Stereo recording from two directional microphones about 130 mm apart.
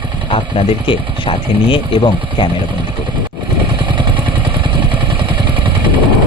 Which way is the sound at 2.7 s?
35° right (ahead or behind).